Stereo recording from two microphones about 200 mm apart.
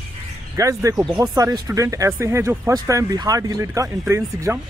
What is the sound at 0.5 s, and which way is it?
Speech, 15° right (ahead or behind).